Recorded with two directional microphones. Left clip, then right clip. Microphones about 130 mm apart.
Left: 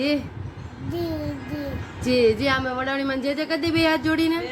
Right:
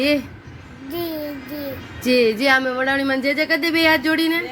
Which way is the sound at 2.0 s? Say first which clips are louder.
Right 3 dB; 55° right (ahead or behind).